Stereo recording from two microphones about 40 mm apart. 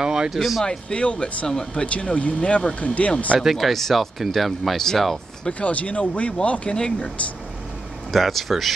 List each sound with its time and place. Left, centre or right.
0.0 s speech: centre
0.4 s speech: centre
0.7 s speech: left
3.3 s speech: centre
5.5 s speech: left
8.1 s speech: centre